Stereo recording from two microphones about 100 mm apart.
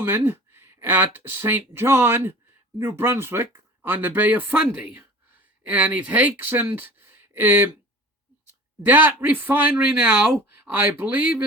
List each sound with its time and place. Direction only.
0.0 s speech: 25° right (ahead or behind)
8.8 s speech: 20° right (ahead or behind)